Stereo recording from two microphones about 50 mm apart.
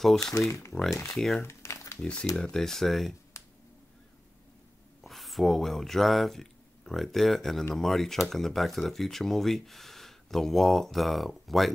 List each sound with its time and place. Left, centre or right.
0.0 s speech: centre
0.5 s speech: left
0.8 s speech: left
1.1 s speech: centre
1.4 s crumpling: left
2.0 s speech: centre
5.0 s speech: centre